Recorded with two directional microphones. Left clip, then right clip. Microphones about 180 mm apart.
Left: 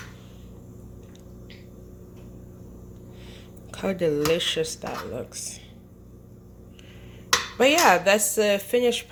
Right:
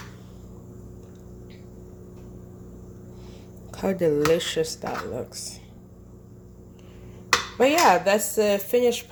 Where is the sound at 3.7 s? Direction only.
15° right (ahead or behind).